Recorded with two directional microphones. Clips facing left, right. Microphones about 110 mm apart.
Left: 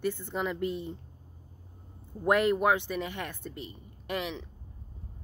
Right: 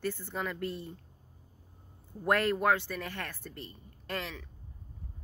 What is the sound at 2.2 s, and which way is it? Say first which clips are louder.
Speech: left 3 dB; 15° left (ahead or behind).